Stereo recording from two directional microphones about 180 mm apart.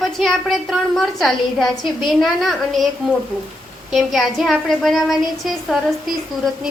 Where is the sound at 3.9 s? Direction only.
Centre (ahead or behind).